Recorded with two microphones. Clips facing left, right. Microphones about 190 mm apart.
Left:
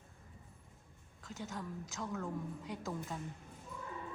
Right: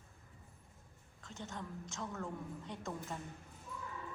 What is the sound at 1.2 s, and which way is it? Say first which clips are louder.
A woman's voice: left 2 dB; centre (ahead or behind).